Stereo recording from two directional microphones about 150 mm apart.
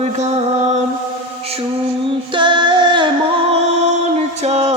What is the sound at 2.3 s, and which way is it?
Singing, 30° right (ahead or behind).